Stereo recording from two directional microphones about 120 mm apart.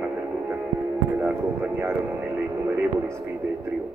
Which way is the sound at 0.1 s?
20° right (ahead or behind).